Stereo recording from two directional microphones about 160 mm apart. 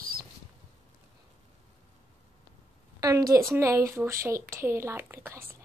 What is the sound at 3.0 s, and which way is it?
A woman's voice, 20° right (ahead or behind).